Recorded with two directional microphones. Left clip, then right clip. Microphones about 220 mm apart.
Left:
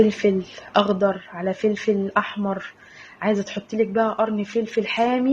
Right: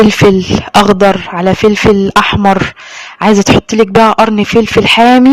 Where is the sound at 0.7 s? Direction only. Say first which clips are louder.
Right 12 dB; 50° right (ahead or behind).